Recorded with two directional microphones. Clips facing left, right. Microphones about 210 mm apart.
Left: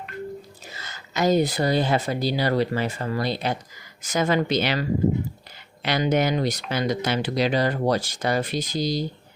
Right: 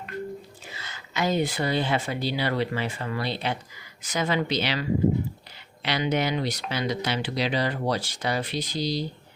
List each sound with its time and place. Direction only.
0.7 s speech: 40° left (ahead or behind)